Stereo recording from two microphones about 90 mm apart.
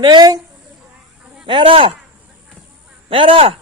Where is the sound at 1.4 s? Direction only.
70° right (ahead or behind).